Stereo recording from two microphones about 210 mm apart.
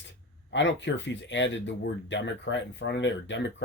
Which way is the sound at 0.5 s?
60° left (ahead or behind).